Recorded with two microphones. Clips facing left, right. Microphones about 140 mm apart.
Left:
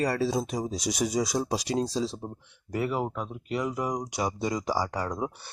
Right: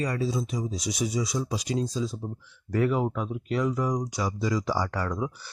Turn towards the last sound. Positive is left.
turn(degrees=15)  # may be behind; listen again after turning